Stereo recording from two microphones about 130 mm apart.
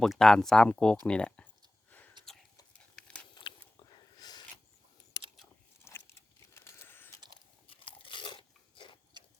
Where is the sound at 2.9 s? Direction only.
10° left (ahead or behind).